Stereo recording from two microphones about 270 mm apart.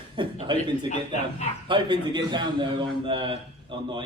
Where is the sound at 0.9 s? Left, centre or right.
Left.